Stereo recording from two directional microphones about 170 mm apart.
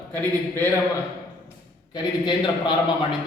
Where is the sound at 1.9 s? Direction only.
25° left (ahead or behind).